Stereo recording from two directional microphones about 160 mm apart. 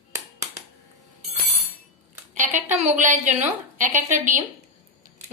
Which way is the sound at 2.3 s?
50° right (ahead or behind).